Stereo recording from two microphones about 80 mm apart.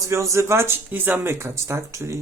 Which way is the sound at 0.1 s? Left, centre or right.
Right.